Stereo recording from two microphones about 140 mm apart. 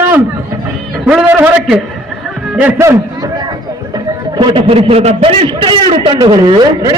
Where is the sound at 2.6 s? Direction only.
15° right (ahead or behind).